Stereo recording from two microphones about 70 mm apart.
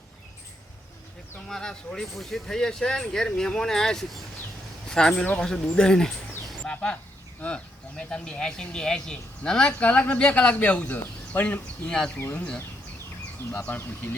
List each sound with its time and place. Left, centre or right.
1.5 s speech: centre
13.5 s speech: centre
13.7 s speech: left